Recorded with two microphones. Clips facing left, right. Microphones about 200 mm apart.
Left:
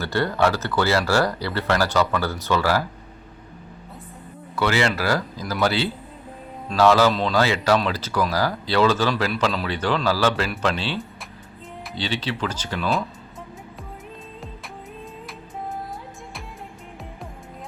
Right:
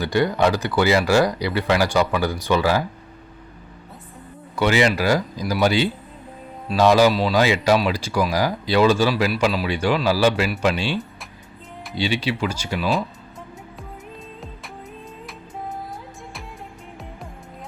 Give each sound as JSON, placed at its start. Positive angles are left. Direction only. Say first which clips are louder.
{"t": 0.0, "sound": "speech", "louder": "right 2 dB", "side_deg": -15}
{"t": 4.5, "sound": "speech", "louder": "right 3 dB", "side_deg": -15}